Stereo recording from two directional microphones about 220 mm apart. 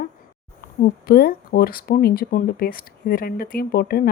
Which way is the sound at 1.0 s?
45° left (ahead or behind).